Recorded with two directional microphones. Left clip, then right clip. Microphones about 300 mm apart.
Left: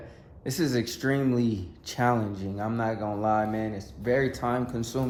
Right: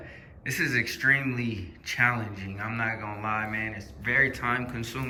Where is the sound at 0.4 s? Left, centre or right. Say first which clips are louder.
Right 2 dB; centre.